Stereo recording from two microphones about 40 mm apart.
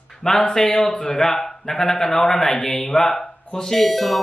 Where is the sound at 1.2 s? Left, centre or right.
Centre.